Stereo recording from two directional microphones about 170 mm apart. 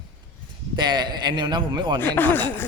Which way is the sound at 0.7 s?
25° right (ahead or behind).